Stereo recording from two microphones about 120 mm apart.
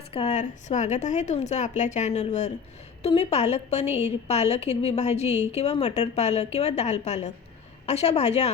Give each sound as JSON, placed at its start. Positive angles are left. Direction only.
{"t": 0.1, "sound": "a woman's voice", "side_deg": 50}
{"t": 0.3, "sound": "a woman's voice", "side_deg": 80}